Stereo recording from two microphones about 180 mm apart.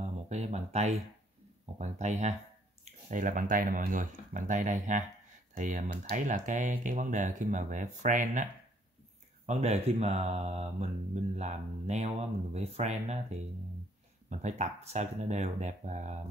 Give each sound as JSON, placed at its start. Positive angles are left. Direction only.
{"t": 0.0, "sound": "a sound", "side_deg": -40}
{"t": 1.8, "sound": "mantra", "side_deg": -40}
{"t": 2.8, "sound": "speech", "side_deg": -45}
{"t": 9.5, "sound": "mantra", "side_deg": -35}